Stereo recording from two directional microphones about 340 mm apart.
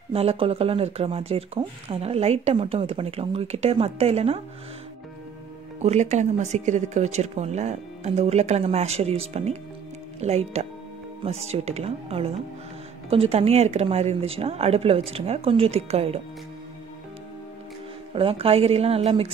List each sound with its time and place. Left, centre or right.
0.1 s speech: centre
5.8 s speech: centre
18.1 s speech: centre